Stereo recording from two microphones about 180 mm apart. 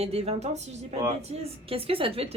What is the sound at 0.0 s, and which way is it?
A woman's voice, 35° right (ahead or behind).